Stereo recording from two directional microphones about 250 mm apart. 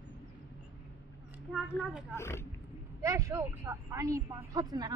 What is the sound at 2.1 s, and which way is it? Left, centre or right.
Speech, centre.